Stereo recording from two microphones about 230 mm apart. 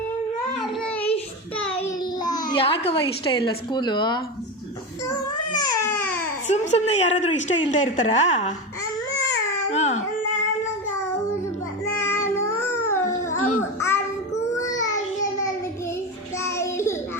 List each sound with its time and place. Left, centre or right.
0.6 s child singing: centre
2.5 s a woman's voice: left
5.5 s baby cry: centre
6.5 s a woman's voice: left
9.7 s baby cry: left
11.9 s music: centre
13.3 s babbling: left
13.7 s babbling: centre
14.5 s child singing: centre
16.4 s music: centre